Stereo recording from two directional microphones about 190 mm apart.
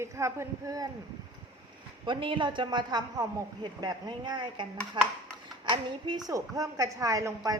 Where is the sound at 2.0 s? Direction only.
25° right (ahead or behind).